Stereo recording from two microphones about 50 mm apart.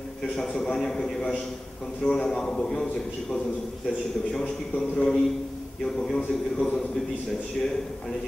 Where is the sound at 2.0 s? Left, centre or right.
Centre.